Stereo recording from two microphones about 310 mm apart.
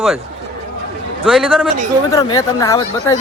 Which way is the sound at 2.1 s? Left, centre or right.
Centre.